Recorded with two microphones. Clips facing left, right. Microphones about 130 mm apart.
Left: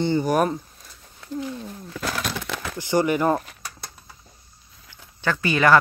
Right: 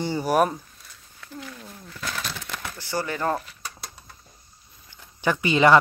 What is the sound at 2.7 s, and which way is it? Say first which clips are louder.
Speech: left 8 dB; 15° left (ahead or behind).